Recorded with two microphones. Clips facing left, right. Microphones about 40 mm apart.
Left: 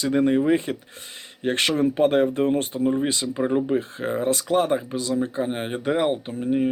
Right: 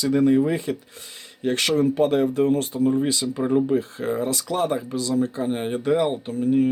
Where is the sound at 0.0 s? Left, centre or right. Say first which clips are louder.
Right 1 dB; left.